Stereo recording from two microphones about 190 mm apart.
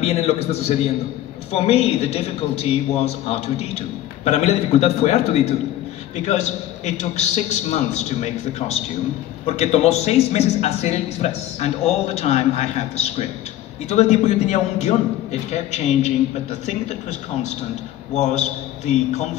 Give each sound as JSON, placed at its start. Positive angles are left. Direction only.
{"t": 0.0, "sound": "a man's voice", "side_deg": 35}
{"t": 18.1, "sound": "a man's voice", "side_deg": 35}